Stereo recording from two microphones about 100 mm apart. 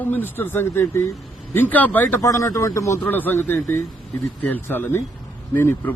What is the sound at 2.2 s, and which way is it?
Speech, 30° left (ahead or behind).